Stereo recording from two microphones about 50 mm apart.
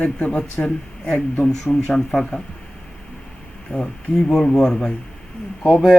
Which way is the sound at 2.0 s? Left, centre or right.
Centre.